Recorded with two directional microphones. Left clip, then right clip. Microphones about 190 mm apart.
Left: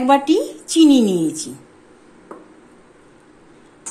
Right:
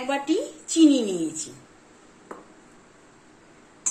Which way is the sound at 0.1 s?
55° left (ahead or behind).